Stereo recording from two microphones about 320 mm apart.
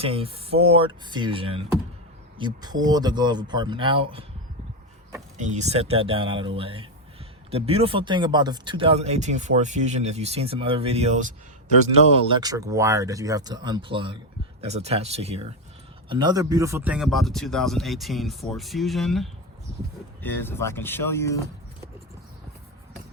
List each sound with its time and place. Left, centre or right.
0.0 s speech: centre
5.4 s speech: right
12.3 s a man's voice: centre